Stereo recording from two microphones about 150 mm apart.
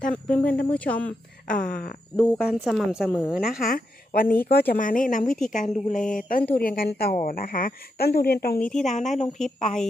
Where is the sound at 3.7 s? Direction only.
80° left.